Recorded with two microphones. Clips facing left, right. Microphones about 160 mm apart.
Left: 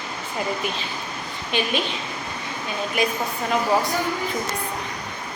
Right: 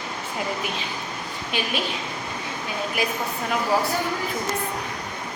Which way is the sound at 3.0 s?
5° right (ahead or behind).